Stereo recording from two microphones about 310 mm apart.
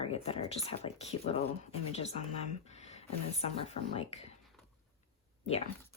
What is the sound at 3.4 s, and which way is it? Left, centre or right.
Speech, centre.